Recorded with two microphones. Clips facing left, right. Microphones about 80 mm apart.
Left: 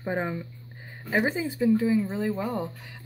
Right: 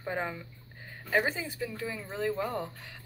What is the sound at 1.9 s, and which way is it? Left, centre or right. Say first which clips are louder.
Speech: left 8 dB; centre.